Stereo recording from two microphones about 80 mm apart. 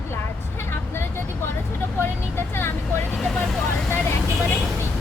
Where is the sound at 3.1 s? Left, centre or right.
Centre.